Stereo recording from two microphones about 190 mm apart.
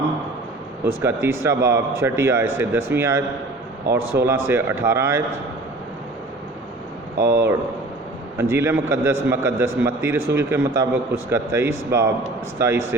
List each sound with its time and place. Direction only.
0.9 s a man's voice: 15° right (ahead or behind)
7.2 s speech: 60° right (ahead or behind)
8.4 s a man's voice: 15° right (ahead or behind)